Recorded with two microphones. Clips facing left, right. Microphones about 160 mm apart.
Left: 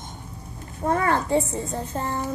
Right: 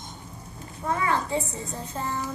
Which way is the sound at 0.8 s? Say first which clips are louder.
Left 4 dB; 50° left (ahead or behind).